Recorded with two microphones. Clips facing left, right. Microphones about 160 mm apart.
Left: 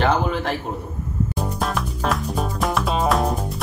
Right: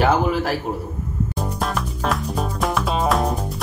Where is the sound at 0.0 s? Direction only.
5° right (ahead or behind).